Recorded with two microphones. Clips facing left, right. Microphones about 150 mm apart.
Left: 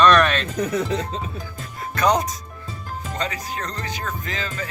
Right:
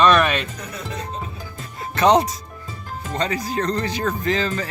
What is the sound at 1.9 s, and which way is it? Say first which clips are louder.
Speech: right 4 dB; 25° right (ahead or behind).